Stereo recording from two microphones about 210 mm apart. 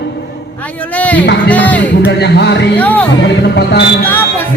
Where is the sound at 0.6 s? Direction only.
5° left (ahead or behind).